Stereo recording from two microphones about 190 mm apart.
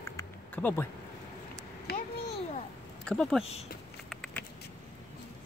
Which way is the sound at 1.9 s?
60° left (ahead or behind).